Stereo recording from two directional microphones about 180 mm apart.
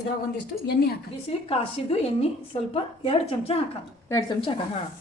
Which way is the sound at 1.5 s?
35° left (ahead or behind).